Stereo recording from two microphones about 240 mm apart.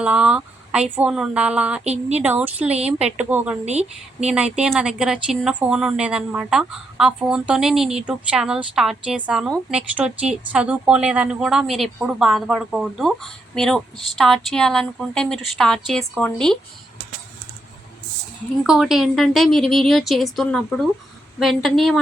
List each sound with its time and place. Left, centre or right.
0.0 s speech: centre
1.8 s speech: right
2.2 s speech: centre
3.7 s speech: right
4.3 s speech: centre
18.6 s speech: centre